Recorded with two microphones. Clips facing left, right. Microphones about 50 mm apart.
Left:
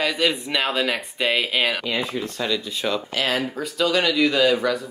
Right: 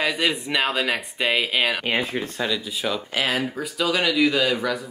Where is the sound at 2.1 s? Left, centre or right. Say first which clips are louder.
Even; right.